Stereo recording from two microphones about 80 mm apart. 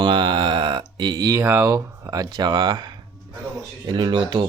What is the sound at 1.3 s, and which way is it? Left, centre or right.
Speech, right.